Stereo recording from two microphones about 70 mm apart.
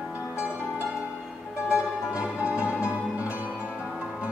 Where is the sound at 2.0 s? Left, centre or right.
Centre.